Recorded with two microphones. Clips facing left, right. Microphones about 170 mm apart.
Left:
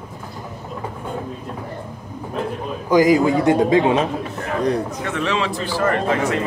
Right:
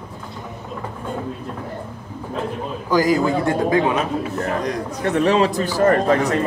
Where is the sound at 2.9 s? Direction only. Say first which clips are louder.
Left 3 dB; 20° left (ahead or behind).